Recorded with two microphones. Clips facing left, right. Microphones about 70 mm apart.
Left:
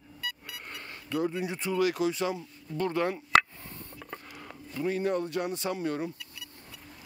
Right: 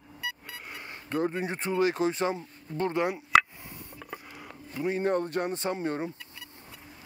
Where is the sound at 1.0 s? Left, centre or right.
Right; by 3.3 s centre.